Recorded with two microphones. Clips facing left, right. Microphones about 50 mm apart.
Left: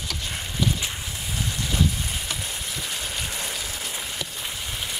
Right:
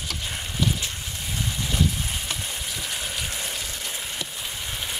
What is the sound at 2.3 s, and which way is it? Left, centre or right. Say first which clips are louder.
Frying: even; centre.